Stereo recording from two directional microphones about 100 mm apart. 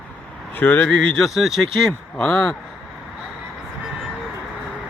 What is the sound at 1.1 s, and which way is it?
Speech, centre (ahead or behind).